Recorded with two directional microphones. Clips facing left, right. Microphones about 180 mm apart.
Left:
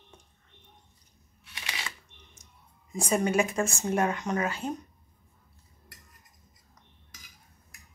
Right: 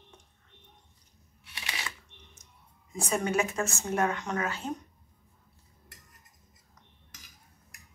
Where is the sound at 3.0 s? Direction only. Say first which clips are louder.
Left 3 dB; 15° left (ahead or behind).